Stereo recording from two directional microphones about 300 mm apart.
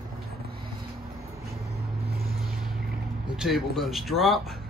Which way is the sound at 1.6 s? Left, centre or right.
Right.